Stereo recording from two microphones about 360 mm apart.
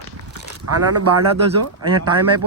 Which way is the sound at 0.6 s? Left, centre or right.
Right.